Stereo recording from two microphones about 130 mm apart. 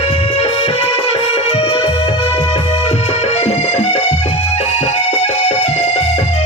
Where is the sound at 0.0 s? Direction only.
45° left (ahead or behind).